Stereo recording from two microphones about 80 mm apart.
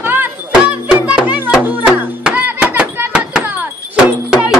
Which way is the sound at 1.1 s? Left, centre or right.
Centre.